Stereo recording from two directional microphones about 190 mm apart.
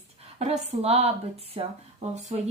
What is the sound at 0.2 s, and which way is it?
A woman's voice, 35° right (ahead or behind).